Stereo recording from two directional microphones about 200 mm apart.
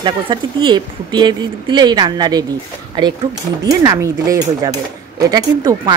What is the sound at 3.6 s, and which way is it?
Speech, 20° right (ahead or behind).